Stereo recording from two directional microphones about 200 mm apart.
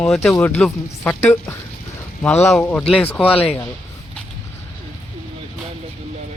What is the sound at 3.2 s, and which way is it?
Speech, 30° left (ahead or behind).